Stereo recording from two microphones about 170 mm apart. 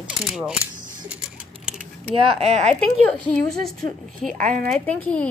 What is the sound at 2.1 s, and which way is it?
Speech, 35° right (ahead or behind).